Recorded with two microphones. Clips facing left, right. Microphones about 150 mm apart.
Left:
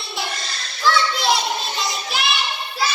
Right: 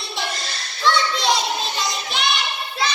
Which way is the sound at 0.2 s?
Centre (ahead or behind).